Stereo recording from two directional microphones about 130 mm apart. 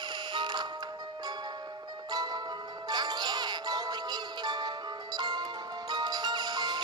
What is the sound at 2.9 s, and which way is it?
Music, 35° right (ahead or behind).